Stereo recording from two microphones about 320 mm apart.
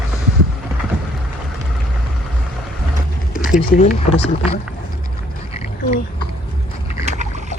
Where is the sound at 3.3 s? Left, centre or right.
Left.